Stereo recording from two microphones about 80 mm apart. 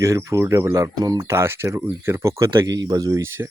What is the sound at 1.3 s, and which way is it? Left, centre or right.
Speech, right.